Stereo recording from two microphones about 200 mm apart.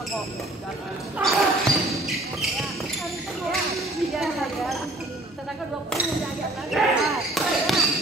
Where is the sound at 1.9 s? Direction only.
Centre (ahead or behind).